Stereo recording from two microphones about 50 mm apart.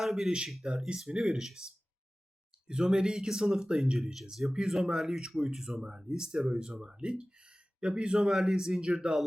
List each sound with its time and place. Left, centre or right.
0.0 s speech: centre
8.2 s speech: centre